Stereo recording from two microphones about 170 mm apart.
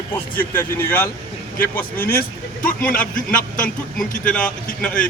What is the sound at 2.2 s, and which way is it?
A man's voice, 55° left (ahead or behind).